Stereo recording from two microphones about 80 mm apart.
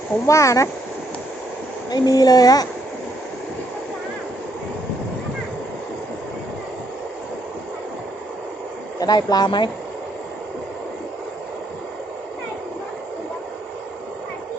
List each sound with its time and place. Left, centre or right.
0.3 s speech: left
1.9 s speech: left
9.0 s speech: left